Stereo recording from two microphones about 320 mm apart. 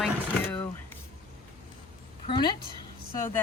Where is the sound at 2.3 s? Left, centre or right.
Centre.